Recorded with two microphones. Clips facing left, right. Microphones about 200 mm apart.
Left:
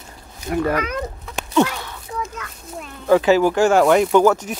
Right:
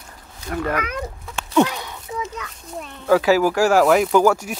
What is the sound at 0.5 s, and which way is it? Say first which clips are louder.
Speech: left 4 dB; 10° left (ahead or behind).